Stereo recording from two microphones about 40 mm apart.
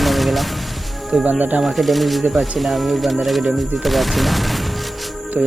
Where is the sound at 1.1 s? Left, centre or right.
Right.